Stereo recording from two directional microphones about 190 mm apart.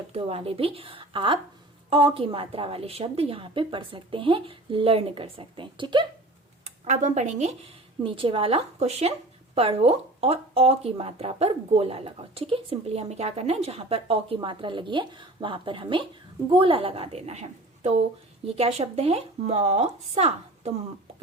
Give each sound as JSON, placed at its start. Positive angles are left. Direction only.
{"t": 0.1, "sound": "a woman's voice", "side_deg": -30}
{"t": 6.7, "sound": "a woman's voice", "side_deg": -40}